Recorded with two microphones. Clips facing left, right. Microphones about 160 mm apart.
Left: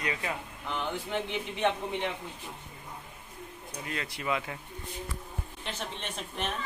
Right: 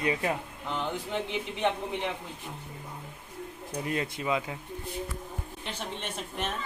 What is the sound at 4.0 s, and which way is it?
Speech, 20° right (ahead or behind).